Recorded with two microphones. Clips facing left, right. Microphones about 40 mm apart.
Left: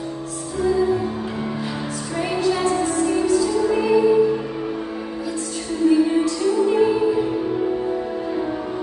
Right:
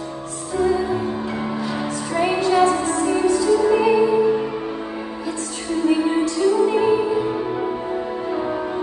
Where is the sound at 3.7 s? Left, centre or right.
Right.